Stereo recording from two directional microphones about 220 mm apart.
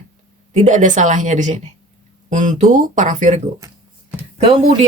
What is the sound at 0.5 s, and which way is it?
A woman's voice, 35° right (ahead or behind).